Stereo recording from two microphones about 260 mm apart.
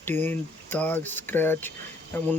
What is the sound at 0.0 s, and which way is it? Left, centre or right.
Speech, centre.